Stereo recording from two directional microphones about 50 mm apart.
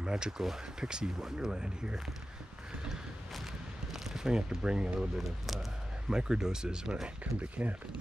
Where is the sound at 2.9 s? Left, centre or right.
Centre.